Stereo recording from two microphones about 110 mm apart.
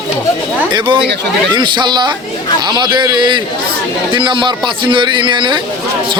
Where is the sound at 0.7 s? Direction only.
45° right (ahead or behind).